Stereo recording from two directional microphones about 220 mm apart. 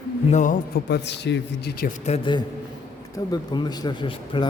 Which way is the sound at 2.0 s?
25° left (ahead or behind).